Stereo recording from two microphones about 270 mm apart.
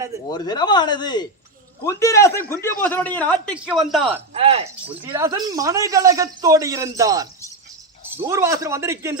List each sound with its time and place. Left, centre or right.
0.3 s a man's voice: centre
4.4 s speech: right
5.0 s speech: centre